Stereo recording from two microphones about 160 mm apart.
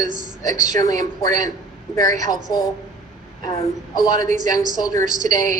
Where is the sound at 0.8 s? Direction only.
25° left (ahead or behind).